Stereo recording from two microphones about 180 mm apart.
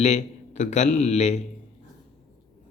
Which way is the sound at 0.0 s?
40° left (ahead or behind).